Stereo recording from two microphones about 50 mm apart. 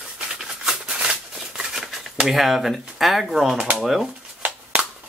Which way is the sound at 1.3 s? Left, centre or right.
Centre.